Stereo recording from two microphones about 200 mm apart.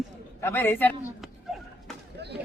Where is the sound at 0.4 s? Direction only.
10° left (ahead or behind).